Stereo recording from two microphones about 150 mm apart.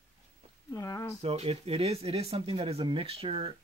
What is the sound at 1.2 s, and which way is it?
Speech, 40° right (ahead or behind).